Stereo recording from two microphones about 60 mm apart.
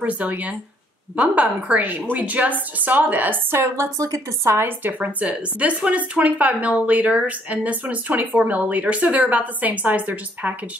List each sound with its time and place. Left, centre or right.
0.0 s speech: right
3.5 s a woman's voice: right
4.6 s a woman's voice: right